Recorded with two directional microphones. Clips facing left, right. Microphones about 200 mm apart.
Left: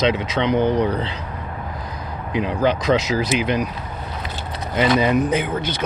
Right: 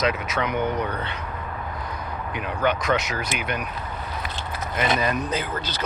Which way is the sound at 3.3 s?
90° left.